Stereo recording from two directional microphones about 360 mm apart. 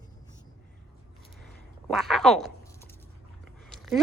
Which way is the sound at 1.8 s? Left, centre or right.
Centre.